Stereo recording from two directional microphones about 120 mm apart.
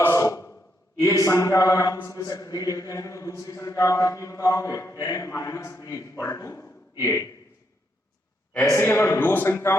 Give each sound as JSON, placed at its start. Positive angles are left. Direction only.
{"t": 0.0, "sound": "a man's voice", "side_deg": 25}
{"t": 8.6, "sound": "a man's voice", "side_deg": 20}